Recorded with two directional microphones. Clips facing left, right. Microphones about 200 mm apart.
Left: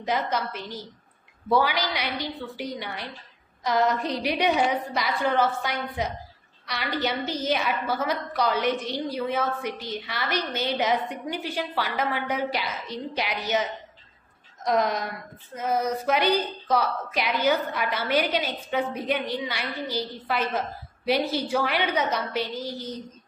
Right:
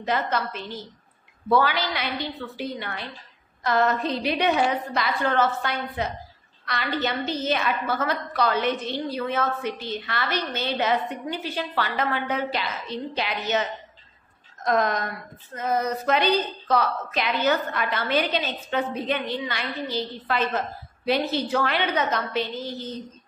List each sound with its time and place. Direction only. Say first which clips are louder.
0.0 s speech: right 1 dB; 15° left (ahead or behind)